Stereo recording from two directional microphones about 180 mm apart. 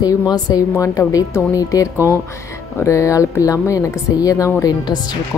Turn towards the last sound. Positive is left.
turn(degrees=20)  # may be behind; listen again after turning